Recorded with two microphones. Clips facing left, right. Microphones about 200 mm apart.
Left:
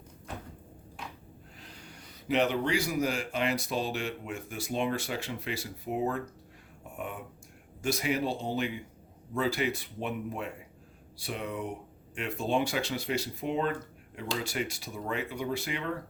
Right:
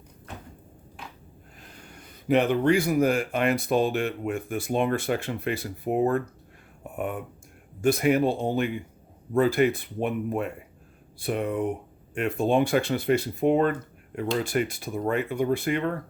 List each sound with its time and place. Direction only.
1.6 s speech: 50° right (ahead or behind)